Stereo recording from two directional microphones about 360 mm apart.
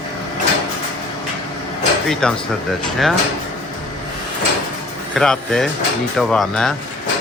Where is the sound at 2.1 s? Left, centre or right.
Centre.